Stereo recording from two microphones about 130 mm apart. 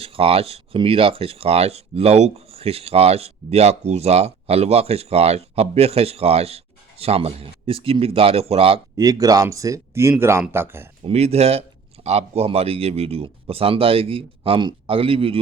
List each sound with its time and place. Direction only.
0.0 s speech: 45° right (ahead or behind)
9.0 s speech: 30° right (ahead or behind)
11.0 s speech: 55° right (ahead or behind)